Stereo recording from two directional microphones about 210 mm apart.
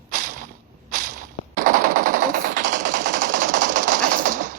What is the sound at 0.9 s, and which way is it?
Whip, 40° right (ahead or behind).